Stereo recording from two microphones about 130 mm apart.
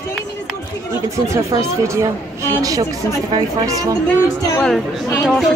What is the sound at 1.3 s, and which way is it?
Speech, 25° right (ahead or behind).